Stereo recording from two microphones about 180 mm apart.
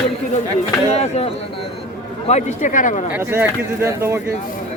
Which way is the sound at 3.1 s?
15° right (ahead or behind).